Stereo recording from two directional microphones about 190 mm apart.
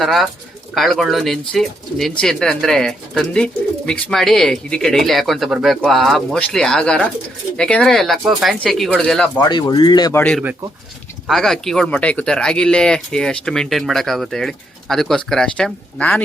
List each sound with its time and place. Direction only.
0.0 s speech: centre (ahead or behind)
9.4 s speech: 25° left (ahead or behind)
11.3 s speech: centre (ahead or behind)